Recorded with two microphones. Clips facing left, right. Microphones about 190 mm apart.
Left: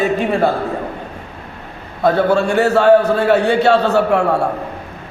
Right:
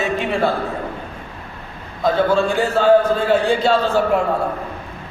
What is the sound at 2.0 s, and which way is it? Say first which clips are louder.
A man's voice: left 3 dB; 65° left (ahead or behind).